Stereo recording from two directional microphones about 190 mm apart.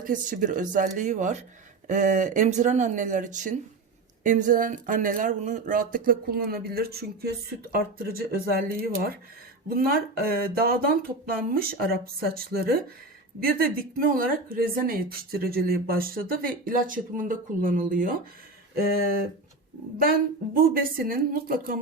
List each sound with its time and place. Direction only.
0.0 s speech: 45° right (ahead or behind)
20.0 s speech: 50° right (ahead or behind)